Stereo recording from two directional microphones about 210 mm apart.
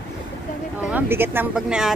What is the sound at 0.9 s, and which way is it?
Speech, 10° right (ahead or behind).